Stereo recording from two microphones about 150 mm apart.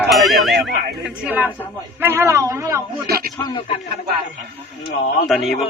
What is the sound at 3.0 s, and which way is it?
Speech, 90° right.